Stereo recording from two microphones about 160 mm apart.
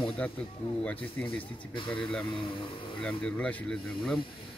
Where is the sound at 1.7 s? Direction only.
30° left (ahead or behind).